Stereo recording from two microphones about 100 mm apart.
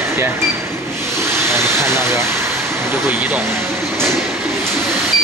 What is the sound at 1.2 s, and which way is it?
Speech, 25° right (ahead or behind).